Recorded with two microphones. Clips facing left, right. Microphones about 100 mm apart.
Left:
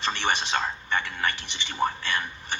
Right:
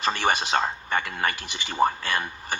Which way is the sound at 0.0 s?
40° right (ahead or behind).